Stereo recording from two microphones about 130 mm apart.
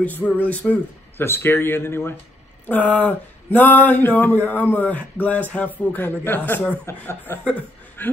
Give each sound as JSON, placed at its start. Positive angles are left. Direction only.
{"t": 0.0, "sound": "speech", "side_deg": 15}